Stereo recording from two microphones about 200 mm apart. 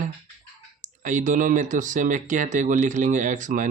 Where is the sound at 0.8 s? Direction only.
40° right (ahead or behind).